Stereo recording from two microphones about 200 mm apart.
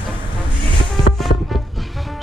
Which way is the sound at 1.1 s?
Centre (ahead or behind).